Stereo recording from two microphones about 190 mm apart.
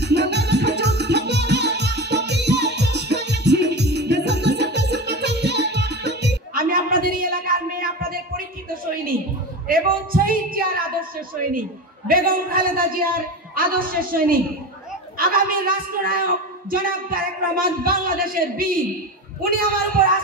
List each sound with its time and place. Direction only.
0.0 s music: 60° right (ahead or behind)
9.7 s a sound: 50° right (ahead or behind)
13.6 s a man's voice: 50° right (ahead or behind)